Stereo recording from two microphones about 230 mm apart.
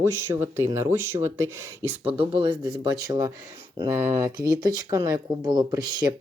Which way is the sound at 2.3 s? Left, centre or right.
Centre.